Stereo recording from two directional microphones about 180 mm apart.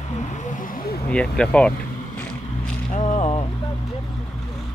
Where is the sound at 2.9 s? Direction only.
40° left (ahead or behind).